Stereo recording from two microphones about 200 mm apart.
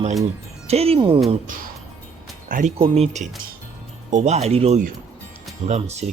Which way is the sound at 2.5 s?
45° right (ahead or behind).